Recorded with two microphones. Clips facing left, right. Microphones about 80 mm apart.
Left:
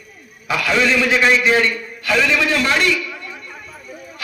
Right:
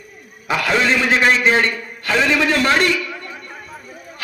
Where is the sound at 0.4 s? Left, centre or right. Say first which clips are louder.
Even; right.